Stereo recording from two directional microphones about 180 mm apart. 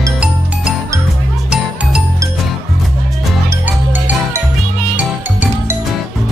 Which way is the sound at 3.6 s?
10° right (ahead or behind).